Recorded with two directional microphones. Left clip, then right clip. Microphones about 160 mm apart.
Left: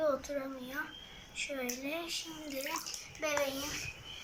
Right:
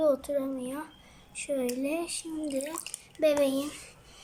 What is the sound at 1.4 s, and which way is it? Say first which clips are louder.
Speech: right 7 dB; 50° right (ahead or behind).